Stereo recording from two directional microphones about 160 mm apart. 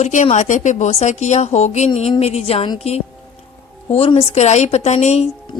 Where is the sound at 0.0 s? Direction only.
45° left (ahead or behind).